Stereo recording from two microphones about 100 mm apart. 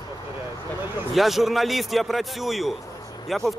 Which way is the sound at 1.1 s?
Centre (ahead or behind).